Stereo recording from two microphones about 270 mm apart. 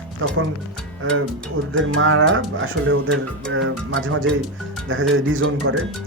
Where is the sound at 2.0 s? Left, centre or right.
Right.